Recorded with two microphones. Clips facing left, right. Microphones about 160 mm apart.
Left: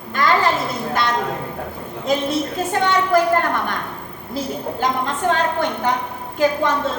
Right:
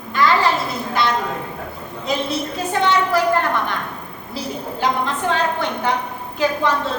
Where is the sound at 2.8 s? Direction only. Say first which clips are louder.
Right 1 dB; 45° left (ahead or behind).